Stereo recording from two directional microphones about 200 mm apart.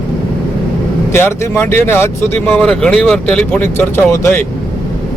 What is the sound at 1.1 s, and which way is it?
Speech, 10° left (ahead or behind).